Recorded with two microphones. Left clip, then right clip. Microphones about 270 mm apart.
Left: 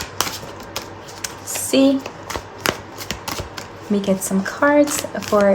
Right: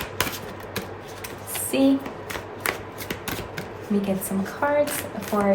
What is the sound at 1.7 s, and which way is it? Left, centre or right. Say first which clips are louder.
Speech: left 6 dB; left.